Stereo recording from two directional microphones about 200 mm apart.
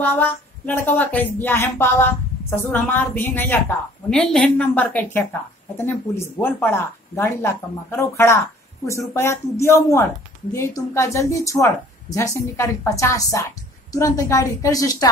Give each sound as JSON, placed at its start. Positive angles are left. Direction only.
{"t": 0.0, "sound": "speech", "side_deg": 10}